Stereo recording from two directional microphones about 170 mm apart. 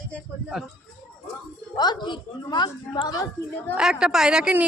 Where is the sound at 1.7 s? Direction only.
25° left (ahead or behind).